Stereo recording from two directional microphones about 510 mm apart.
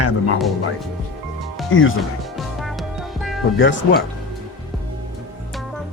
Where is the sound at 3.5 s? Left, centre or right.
Left.